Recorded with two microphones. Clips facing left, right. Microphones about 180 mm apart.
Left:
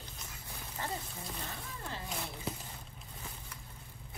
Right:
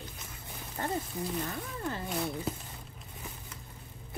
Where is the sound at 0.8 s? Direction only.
45° right (ahead or behind).